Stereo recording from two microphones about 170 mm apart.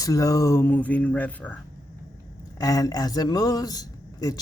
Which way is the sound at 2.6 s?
20° left (ahead or behind).